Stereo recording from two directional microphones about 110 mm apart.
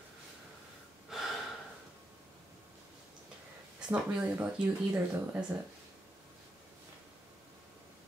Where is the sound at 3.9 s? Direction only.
15° right (ahead or behind).